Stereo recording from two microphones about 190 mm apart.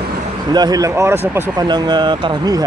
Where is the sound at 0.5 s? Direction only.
20° right (ahead or behind).